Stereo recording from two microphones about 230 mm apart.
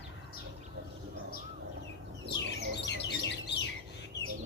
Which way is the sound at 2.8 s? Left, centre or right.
Left.